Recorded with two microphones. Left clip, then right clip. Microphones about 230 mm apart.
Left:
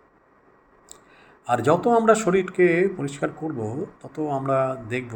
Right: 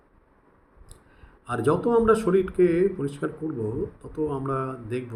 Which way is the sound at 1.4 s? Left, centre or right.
Centre.